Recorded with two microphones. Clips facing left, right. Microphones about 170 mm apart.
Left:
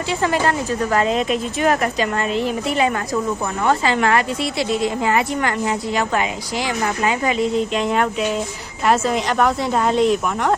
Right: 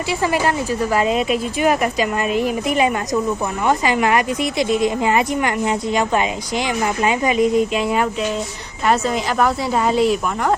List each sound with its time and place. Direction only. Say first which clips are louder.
0.1 s speech: even; 10° right (ahead or behind)